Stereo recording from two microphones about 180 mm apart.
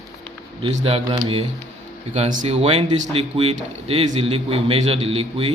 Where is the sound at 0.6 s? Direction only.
35° right (ahead or behind).